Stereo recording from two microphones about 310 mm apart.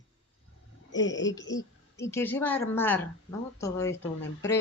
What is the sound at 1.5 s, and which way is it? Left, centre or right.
A woman's voice, centre.